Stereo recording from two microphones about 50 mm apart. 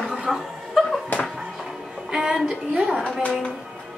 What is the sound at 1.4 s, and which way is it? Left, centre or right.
Music, centre.